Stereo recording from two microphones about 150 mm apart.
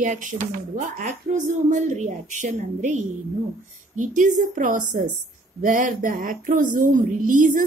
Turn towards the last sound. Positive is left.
turn(degrees=-60)  # may be behind; listen again after turning